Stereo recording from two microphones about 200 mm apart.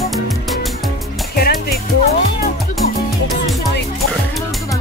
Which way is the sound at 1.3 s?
50° left (ahead or behind).